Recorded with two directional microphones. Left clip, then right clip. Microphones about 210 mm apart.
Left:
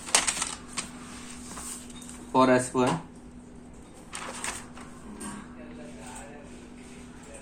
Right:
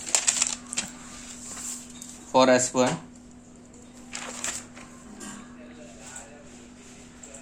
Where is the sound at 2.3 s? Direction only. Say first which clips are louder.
Right 3 dB; 55° right (ahead or behind).